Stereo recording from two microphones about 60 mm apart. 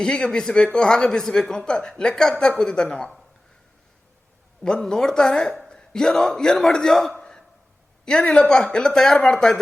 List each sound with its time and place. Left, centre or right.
0.0 s speech: centre
4.6 s a man's voice: centre
7.1 s a sound: centre
8.0 s speech: centre